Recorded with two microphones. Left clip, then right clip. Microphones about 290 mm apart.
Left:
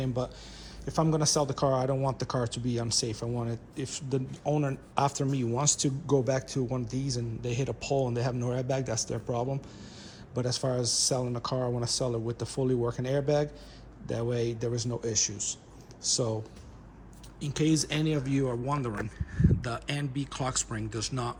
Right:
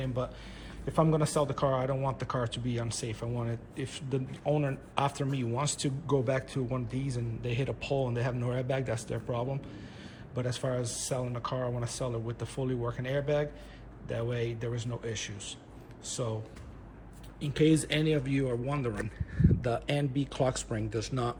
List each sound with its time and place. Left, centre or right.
0.0 s a man's voice: centre
17.4 s a man's voice: centre